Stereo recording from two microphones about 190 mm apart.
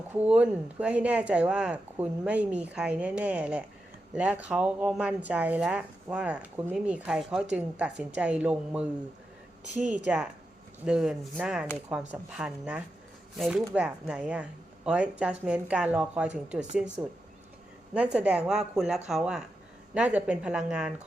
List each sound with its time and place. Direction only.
0.1 s speech: 10° right (ahead or behind)
9.7 s a woman's voice: 40° right (ahead or behind)
10.8 s speech: 5° right (ahead or behind)